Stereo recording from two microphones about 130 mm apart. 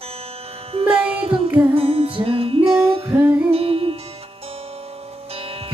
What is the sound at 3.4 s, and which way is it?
Music, 50° right (ahead or behind).